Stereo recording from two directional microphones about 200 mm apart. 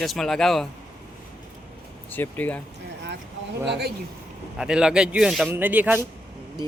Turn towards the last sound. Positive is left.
turn(degrees=-10)  # may be behind; listen again after turning